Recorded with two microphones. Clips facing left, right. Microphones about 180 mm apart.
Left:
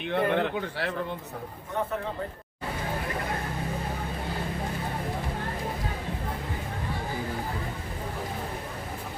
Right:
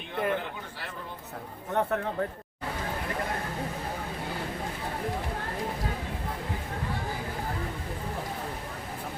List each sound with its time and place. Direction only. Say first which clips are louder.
0.1 s speech: left 5 dB; 75° left (ahead or behind)